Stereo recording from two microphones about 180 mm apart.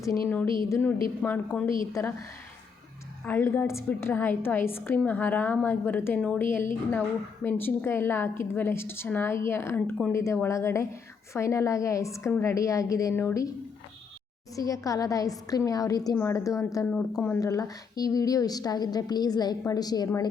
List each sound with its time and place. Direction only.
0.3 s a woman's voice: 10° left (ahead or behind)
3.2 s a woman's voice: 10° left (ahead or behind)
14.5 s a woman's voice: 20° left (ahead or behind)
16.9 s a woman's voice: 5° left (ahead or behind)
17.4 s a woman's voice: 20° left (ahead or behind)